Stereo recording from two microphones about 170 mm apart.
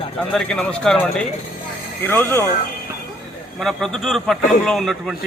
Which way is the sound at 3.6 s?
Centre (ahead or behind).